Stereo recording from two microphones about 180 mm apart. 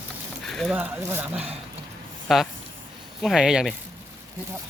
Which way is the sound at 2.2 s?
Centre (ahead or behind).